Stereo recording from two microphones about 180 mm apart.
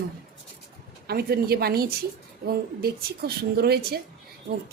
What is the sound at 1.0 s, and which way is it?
A woman's voice, 60° right (ahead or behind).